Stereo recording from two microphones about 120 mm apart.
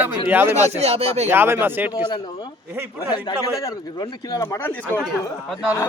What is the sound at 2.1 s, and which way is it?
Speech, 35° left (ahead or behind).